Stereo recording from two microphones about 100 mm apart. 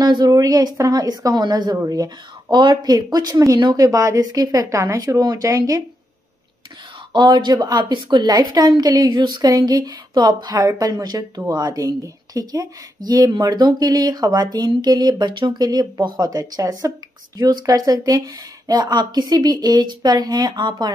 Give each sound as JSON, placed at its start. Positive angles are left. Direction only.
{"t": 0.0, "sound": "a woman's voice", "side_deg": -40}
{"t": 7.1, "sound": "a woman's voice", "side_deg": -45}